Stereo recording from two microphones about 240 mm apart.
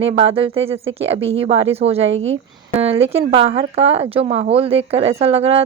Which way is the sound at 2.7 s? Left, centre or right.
Right.